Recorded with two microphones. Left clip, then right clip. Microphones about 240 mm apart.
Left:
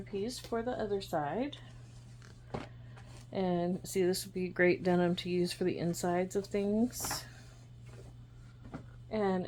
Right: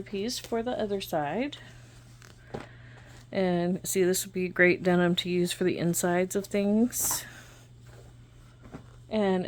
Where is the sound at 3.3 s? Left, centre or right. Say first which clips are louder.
Right 6 dB; right.